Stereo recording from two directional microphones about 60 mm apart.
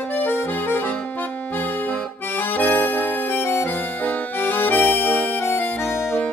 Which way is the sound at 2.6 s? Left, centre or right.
Left.